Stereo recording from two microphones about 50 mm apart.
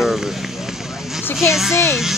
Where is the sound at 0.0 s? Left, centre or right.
Centre.